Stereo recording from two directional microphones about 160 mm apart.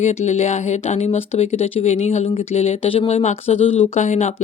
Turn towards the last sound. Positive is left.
turn(degrees=45)  # may be behind; listen again after turning